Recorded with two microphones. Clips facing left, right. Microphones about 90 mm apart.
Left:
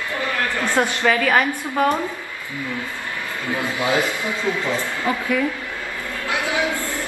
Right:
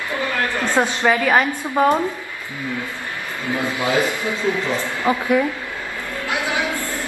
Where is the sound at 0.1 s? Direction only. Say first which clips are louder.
Right 2 dB; 20° right (ahead or behind).